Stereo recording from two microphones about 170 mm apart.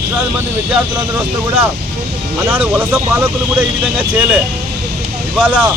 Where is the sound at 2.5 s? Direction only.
10° right (ahead or behind).